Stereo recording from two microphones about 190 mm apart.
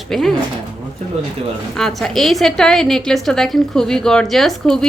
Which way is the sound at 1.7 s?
Centre (ahead or behind).